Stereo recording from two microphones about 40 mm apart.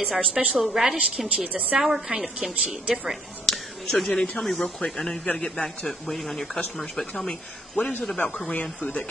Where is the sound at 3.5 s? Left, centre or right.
Centre.